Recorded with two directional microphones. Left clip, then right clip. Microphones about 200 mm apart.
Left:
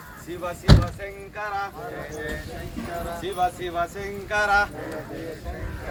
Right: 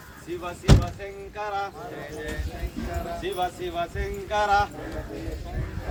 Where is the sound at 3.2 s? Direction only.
Centre (ahead or behind).